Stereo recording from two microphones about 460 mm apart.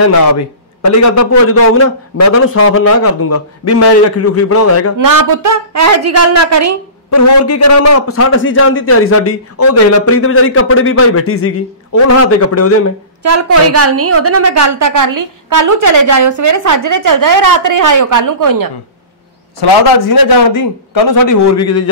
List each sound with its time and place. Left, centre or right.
0.0 s a man's voice: left
4.9 s a woman's voice: right
7.1 s a man's voice: left
13.2 s a woman's voice: right
19.6 s a man's voice: left